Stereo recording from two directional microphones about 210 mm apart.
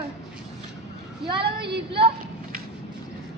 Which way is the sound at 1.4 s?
50° right (ahead or behind).